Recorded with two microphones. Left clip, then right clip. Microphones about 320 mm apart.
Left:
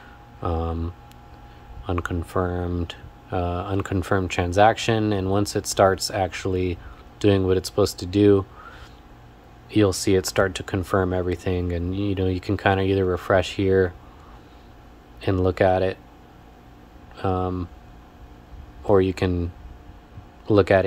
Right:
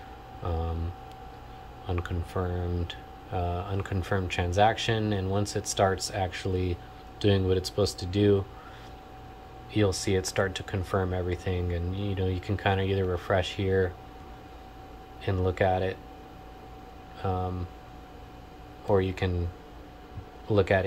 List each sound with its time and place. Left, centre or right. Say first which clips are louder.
0.4 s speech: left 7 dB; centre
1.9 s speech: left 8 dB; centre
9.7 s speech: left 7 dB; centre
15.2 s speech: left 7 dB; centre
18.9 s speech: left 7 dB; centre
20.5 s speech: left 7 dB; centre